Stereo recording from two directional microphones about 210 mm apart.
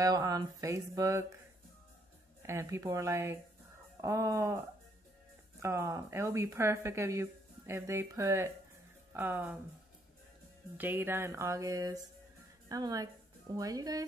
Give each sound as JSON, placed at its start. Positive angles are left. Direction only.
{"t": 0.0, "sound": "speech", "side_deg": -15}
{"t": 2.4, "sound": "speech", "side_deg": -15}
{"t": 5.6, "sound": "speech", "side_deg": -15}
{"t": 10.8, "sound": "a woman's voice", "side_deg": -10}